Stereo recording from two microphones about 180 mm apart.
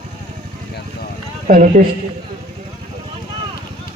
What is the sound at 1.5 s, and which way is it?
Speech, 45° right (ahead or behind).